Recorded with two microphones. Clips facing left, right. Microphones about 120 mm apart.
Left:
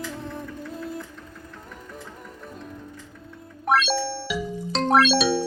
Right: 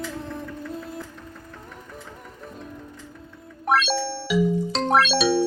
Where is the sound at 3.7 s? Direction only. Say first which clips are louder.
Even; centre (ahead or behind).